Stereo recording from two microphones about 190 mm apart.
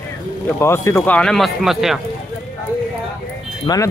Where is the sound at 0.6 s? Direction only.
15° left (ahead or behind); by 2.0 s centre (ahead or behind).